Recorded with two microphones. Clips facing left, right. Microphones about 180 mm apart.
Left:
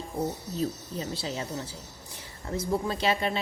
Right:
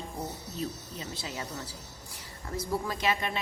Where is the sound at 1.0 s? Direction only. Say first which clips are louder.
Left 5 dB; 30° left (ahead or behind).